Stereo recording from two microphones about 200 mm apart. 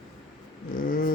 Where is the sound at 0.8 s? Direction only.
45° left (ahead or behind).